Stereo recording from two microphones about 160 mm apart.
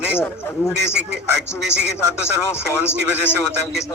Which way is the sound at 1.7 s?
90° right.